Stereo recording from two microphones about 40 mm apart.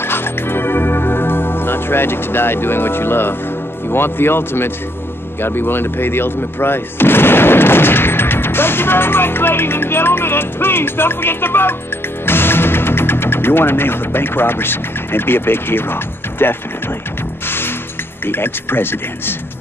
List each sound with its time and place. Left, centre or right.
0.0 s music: left
3.9 s speech: left
17.5 s music: left
18.2 s speech: left